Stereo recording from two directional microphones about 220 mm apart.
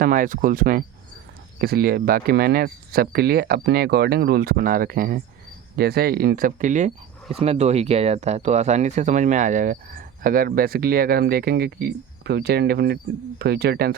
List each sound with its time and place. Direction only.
0.0 s speech: 40° right (ahead or behind)